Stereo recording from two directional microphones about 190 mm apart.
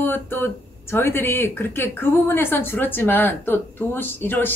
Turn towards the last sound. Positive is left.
turn(degrees=10)  # may be behind; listen again after turning